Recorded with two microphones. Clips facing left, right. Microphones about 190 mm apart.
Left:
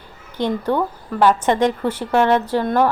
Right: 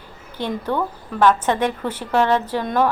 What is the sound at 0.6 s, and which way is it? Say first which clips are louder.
A woman's voice: left 3 dB; 10° left (ahead or behind).